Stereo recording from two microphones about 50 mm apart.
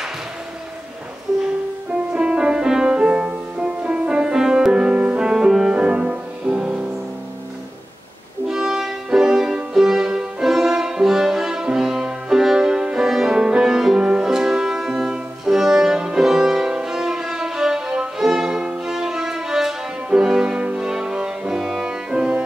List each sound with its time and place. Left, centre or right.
2.1 s music: centre
5.2 s music: centre
5.8 s music: right
8.5 s music: centre